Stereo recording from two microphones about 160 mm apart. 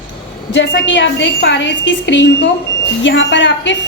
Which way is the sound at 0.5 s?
90° left.